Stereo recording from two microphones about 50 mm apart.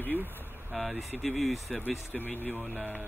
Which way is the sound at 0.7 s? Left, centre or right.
Centre.